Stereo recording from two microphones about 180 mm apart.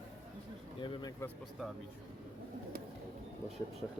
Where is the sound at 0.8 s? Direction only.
25° left (ahead or behind).